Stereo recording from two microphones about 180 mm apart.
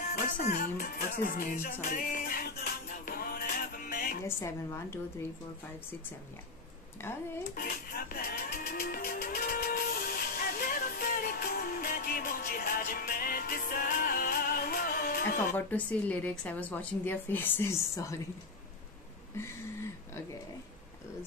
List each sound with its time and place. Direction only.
0.1 s music: 55° left (ahead or behind)
4.2 s a woman's voice: 15° left (ahead or behind)
7.5 s music: 55° left (ahead or behind)
15.5 s a woman's voice: 10° left (ahead or behind)